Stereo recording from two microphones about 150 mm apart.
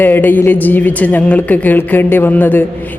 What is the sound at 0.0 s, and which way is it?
A woman's voice, 15° left (ahead or behind).